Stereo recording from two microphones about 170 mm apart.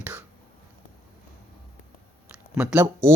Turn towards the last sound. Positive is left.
turn(degrees=-10)  # may be behind; listen again after turning